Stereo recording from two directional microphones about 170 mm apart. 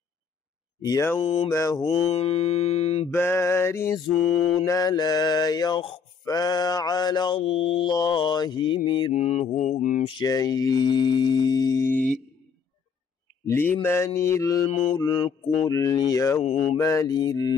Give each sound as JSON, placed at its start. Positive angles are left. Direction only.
{"t": 0.8, "sound": "male singing", "side_deg": 15}
{"t": 1.2, "sound": "mantra", "side_deg": 35}
{"t": 1.5, "sound": "male singing", "side_deg": 15}
{"t": 1.9, "sound": "mantra", "side_deg": 35}
{"t": 3.1, "sound": "male singing", "side_deg": 15}
{"t": 4.2, "sound": "mantra", "side_deg": 0}
{"t": 4.6, "sound": "mantra", "side_deg": 20}
{"t": 9.1, "sound": "mantra", "side_deg": 40}
{"t": 10.0, "sound": "mantra", "side_deg": 25}
{"t": 13.5, "sound": "male singing", "side_deg": 10}
{"t": 15.0, "sound": "mantra", "side_deg": 25}
{"t": 16.4, "sound": "mantra", "side_deg": 40}
{"t": 16.7, "sound": "mantra", "side_deg": 15}